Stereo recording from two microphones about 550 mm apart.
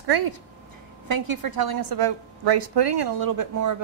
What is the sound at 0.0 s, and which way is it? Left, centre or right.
A woman's voice, right.